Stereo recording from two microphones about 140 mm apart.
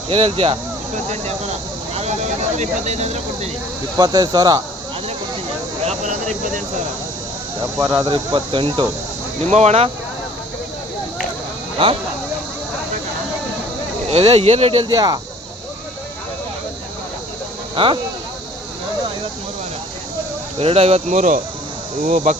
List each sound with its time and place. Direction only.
0.1 s speech: 40° right (ahead or behind)
2.0 s speech: 55° right (ahead or behind)
3.9 s speech: 25° right (ahead or behind)
5.8 s a sound: 55° right (ahead or behind)
8.0 s speech: 35° right (ahead or behind)
9.5 s speech: 50° right (ahead or behind)
11.8 s speech: 40° right (ahead or behind)
14.1 s speech: 45° right (ahead or behind)
14.8 s speech: 30° right (ahead or behind)
17.8 s speech: 35° right (ahead or behind)
20.6 s speech: 45° right (ahead or behind)
21.1 s speech: 70° right (ahead or behind)